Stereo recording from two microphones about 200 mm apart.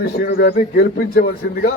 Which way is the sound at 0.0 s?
50° left (ahead or behind).